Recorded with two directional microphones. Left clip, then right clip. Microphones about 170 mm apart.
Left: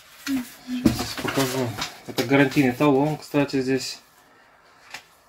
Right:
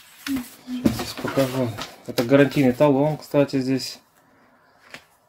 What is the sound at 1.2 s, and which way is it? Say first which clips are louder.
Pigeon: right 2 dB; 15° right (ahead or behind).